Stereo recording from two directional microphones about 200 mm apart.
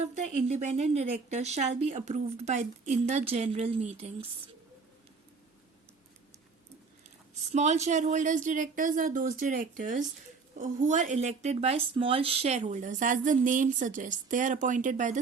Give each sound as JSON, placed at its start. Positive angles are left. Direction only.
{"t": 0.0, "sound": "speech", "side_deg": -35}
{"t": 7.5, "sound": "speech", "side_deg": -35}